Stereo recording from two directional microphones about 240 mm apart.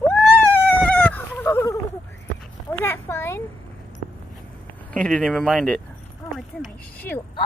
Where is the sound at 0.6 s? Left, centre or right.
Centre.